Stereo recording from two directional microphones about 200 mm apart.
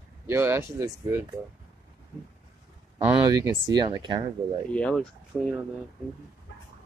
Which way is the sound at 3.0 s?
15° right (ahead or behind).